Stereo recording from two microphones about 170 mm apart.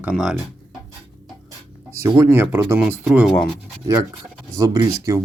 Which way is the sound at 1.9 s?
15° right (ahead or behind).